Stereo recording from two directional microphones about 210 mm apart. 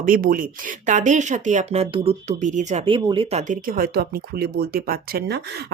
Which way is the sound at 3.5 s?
45° right (ahead or behind).